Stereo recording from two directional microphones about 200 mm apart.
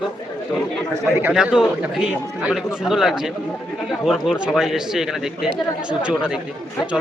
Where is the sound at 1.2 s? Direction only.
5° right (ahead or behind).